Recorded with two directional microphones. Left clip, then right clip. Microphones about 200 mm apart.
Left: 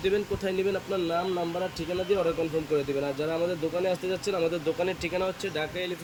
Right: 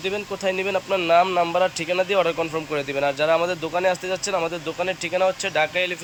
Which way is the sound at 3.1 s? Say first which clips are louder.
Right 8 dB; 5° right (ahead or behind).